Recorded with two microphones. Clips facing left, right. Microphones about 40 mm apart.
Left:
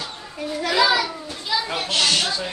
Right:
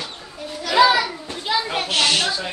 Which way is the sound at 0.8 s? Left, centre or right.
Right.